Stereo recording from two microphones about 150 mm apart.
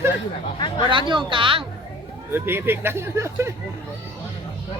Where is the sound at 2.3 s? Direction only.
15° right (ahead or behind).